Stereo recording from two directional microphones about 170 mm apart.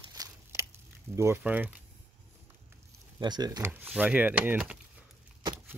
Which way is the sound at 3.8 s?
10° right (ahead or behind).